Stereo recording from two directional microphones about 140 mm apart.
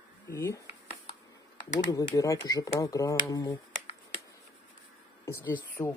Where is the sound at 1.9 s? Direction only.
25° left (ahead or behind).